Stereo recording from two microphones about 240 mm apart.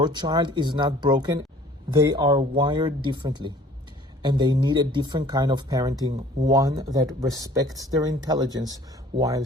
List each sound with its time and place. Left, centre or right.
0.0 s speech: centre